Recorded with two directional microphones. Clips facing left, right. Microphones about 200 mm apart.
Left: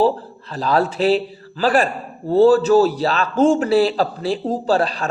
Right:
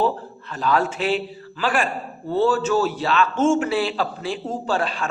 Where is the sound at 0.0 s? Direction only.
35° left (ahead or behind).